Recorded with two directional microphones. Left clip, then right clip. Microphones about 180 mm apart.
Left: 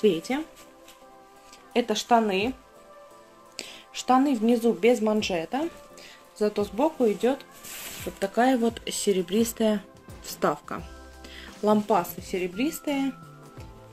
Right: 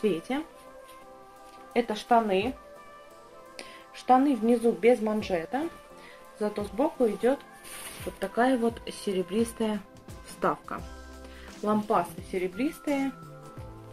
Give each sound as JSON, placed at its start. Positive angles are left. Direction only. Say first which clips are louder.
{"t": 0.0, "sound": "a woman's voice", "louder": "left 5 dB", "side_deg": 45}
{"t": 1.7, "sound": "speech", "louder": "left 2 dB", "side_deg": 45}
{"t": 3.5, "sound": "a woman's voice", "louder": "left 7 dB", "side_deg": 45}